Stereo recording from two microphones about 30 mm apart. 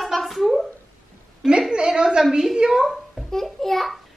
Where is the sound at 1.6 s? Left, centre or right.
Right.